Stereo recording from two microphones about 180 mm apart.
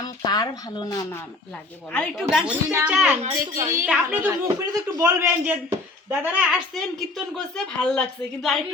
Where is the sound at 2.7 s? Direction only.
15° right (ahead or behind).